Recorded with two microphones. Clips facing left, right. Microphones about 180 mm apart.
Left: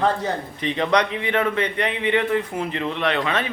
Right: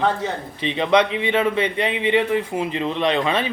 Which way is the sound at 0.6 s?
20° right (ahead or behind).